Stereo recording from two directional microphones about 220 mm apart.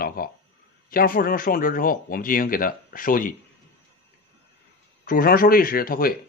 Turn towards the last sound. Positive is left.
turn(degrees=40)  # may be behind; listen again after turning